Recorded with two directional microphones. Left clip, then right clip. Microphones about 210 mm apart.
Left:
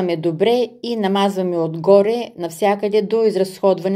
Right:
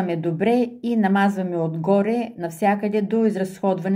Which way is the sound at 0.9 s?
40° left (ahead or behind).